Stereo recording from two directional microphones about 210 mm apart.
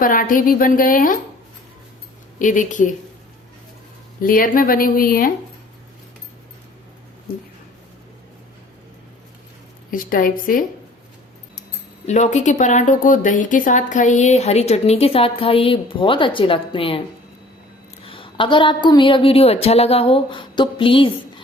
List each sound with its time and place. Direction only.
0.0 s a woman's voice: 40° left (ahead or behind)
2.4 s a woman's voice: 40° left (ahead or behind)
4.2 s speech: 40° left (ahead or behind)
9.9 s a woman's voice: 40° left (ahead or behind)
12.0 s a woman's voice: 35° left (ahead or behind)
18.0 s a woman's voice: 25° left (ahead or behind)